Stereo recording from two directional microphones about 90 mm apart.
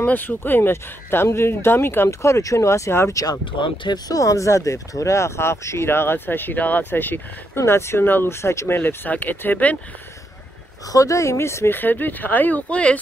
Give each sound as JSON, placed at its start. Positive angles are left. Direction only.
{"t": 0.0, "sound": "speech", "side_deg": 20}
{"t": 3.5, "sound": "speech", "side_deg": 70}
{"t": 4.1, "sound": "speech", "side_deg": 35}
{"t": 10.9, "sound": "speech", "side_deg": 40}